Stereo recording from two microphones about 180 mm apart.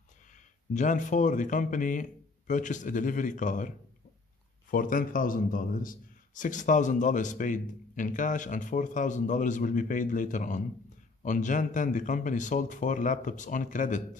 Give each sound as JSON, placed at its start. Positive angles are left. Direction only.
{"t": 0.7, "sound": "a man's voice", "side_deg": 45}